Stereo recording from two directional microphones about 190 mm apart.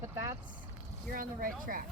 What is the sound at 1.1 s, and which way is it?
Speech, 45° right (ahead or behind).